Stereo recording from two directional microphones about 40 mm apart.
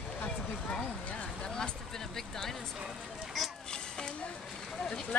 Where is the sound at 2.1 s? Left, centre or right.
Centre.